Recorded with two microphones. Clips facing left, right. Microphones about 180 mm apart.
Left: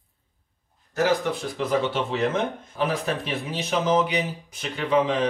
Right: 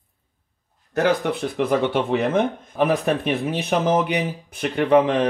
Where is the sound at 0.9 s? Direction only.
60° right (ahead or behind).